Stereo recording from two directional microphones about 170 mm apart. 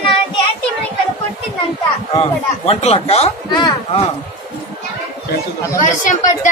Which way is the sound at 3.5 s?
25° left (ahead or behind).